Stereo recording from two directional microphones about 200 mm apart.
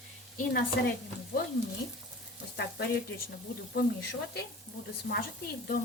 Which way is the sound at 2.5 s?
55° left (ahead or behind).